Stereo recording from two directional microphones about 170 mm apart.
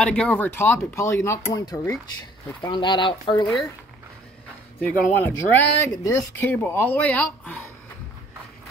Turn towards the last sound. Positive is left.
turn(degrees=10)  # may be behind; listen again after turning